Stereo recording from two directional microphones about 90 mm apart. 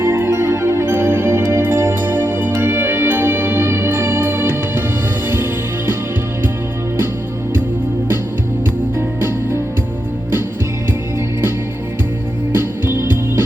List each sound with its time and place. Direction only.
0.0 s music: 25° right (ahead or behind)
9.0 s music: 25° right (ahead or behind)
12.5 s music: 25° right (ahead or behind)